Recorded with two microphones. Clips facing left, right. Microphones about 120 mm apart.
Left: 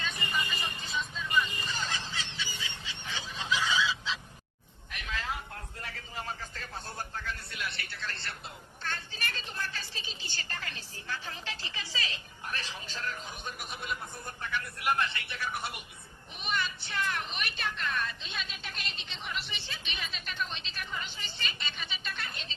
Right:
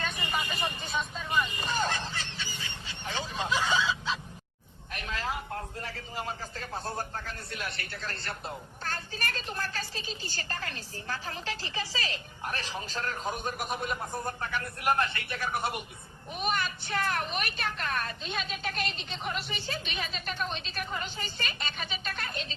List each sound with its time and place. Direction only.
0.0 s vehicle: 55° right (ahead or behind)
4.9 s a man's voice: 40° right (ahead or behind)